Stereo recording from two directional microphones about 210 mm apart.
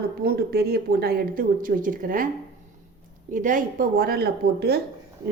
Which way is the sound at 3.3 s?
40° right (ahead or behind).